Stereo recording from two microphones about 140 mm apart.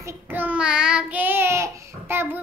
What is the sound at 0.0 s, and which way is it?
Child singing, 15° right (ahead or behind).